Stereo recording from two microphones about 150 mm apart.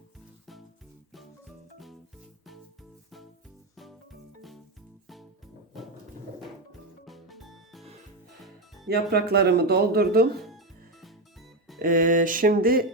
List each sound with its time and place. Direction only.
4.4 s music: centre (ahead or behind)
7.0 s music: centre (ahead or behind)
8.9 s speech: 90° right
11.0 s music: centre (ahead or behind)
11.8 s a sound: 65° right (ahead or behind)